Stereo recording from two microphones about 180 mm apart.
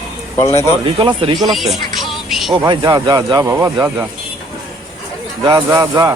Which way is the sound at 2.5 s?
25° right (ahead or behind).